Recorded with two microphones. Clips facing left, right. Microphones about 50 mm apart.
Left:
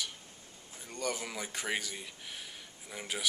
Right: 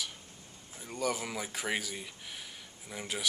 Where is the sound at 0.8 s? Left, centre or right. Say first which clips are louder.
Right 3 dB; centre.